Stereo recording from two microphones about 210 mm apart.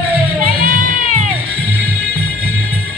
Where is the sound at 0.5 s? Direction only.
40° right (ahead or behind).